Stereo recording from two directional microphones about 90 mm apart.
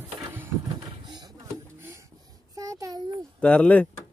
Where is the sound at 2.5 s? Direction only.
40° right (ahead or behind).